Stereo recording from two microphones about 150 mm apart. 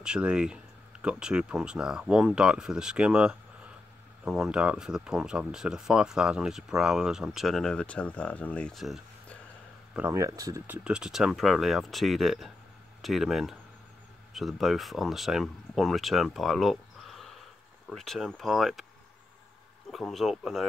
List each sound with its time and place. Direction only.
0.0 s speech: 5° right (ahead or behind)
9.9 s speech: 20° right (ahead or behind)
10.7 s speech: 5° right (ahead or behind)
19.9 s speech: centre (ahead or behind)